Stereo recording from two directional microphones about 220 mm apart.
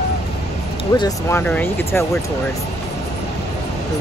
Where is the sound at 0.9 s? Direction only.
15° left (ahead or behind).